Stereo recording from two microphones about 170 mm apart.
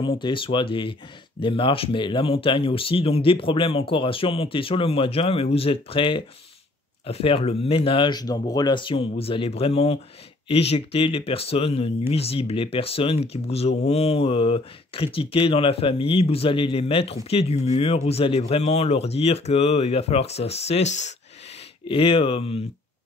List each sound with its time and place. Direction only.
0.2 s speech: 30° left (ahead or behind)
21.8 s speech: 30° left (ahead or behind)